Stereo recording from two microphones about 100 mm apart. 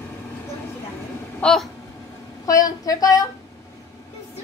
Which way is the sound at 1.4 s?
5° left (ahead or behind).